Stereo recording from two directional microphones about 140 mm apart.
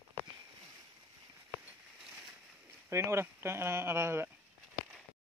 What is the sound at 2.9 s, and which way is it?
Speech, 20° right (ahead or behind).